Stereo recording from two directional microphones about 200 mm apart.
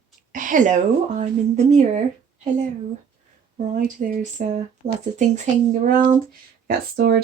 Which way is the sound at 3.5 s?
40° right (ahead or behind).